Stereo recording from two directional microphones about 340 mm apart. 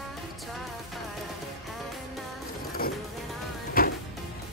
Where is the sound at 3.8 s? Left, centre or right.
Left.